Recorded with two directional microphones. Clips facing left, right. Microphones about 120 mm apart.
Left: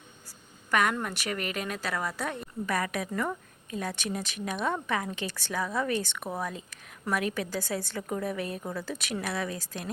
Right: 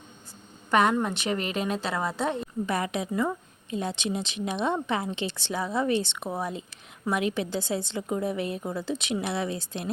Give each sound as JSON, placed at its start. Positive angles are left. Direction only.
{"t": 0.7, "sound": "a woman's voice", "side_deg": -30}